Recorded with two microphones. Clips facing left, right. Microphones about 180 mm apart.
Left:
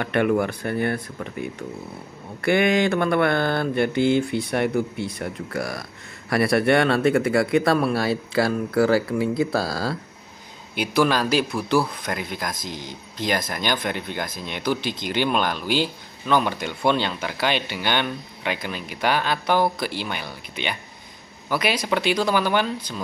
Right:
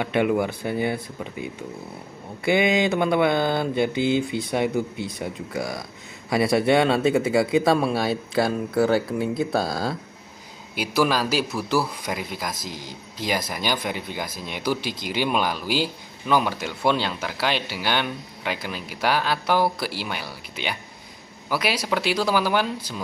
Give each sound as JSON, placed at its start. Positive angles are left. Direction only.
{"t": 0.0, "sound": "speech", "side_deg": -10}
{"t": 2.4, "sound": "speech", "side_deg": -5}
{"t": 3.9, "sound": "speech", "side_deg": 55}
{"t": 4.5, "sound": "speech", "side_deg": -5}